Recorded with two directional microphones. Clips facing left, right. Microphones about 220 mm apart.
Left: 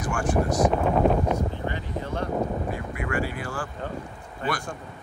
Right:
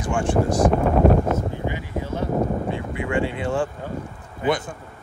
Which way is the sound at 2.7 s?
25° right (ahead or behind).